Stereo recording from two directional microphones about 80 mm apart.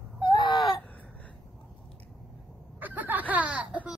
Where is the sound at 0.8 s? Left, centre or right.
Centre.